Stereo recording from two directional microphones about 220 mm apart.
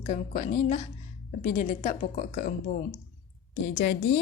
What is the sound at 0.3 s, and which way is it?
A woman's voice, 35° left (ahead or behind).